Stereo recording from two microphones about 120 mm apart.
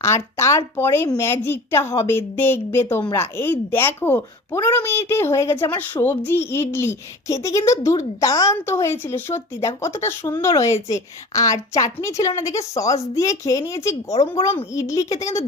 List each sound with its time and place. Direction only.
0.0 s speech: 25° left (ahead or behind)